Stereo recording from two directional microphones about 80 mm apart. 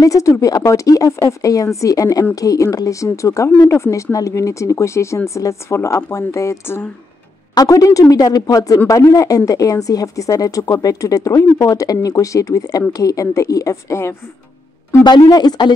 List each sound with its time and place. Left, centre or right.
0.0 s speech: left
15.0 s speech: left